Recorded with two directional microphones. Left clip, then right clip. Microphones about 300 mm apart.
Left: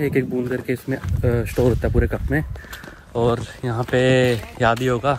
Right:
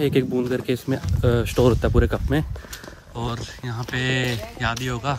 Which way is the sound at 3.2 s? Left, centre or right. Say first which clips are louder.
Left 10 dB; centre.